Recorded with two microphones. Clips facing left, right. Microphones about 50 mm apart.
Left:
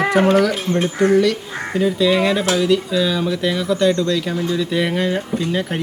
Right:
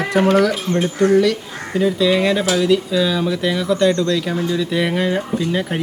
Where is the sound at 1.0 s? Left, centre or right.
Left.